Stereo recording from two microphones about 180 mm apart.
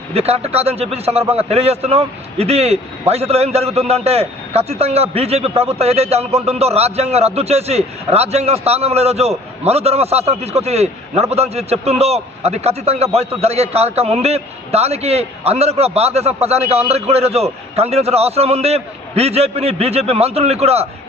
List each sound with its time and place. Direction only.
0.1 s a man's voice: 35° right (ahead or behind)